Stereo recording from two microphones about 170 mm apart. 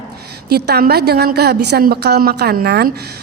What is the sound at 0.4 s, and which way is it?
A woman's voice, 65° right (ahead or behind).